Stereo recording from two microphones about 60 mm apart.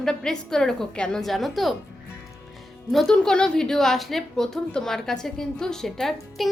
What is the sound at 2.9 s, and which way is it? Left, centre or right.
A woman's voice, centre.